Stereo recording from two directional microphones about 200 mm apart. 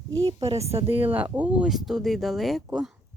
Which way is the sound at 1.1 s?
10° right (ahead or behind).